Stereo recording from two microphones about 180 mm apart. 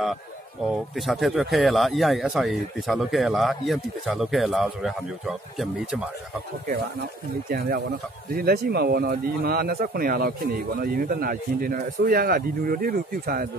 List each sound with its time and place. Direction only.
0.7 s speech: centre (ahead or behind)
6.7 s speech: 55° right (ahead or behind)